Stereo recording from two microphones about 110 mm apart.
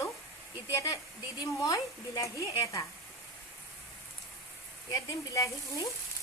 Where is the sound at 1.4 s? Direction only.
35° left (ahead or behind).